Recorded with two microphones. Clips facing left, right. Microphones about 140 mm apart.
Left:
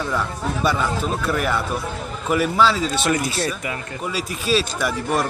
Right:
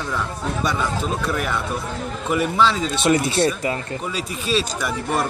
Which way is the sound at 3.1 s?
25° right (ahead or behind).